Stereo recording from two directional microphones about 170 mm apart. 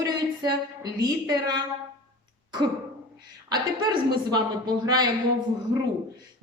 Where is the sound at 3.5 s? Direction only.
25° right (ahead or behind).